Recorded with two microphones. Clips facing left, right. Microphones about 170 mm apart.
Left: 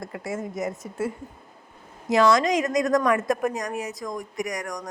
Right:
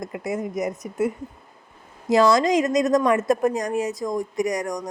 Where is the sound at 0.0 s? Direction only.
20° right (ahead or behind).